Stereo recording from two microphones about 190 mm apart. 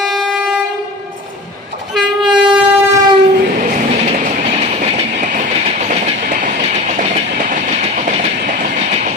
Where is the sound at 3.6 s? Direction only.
45° right (ahead or behind).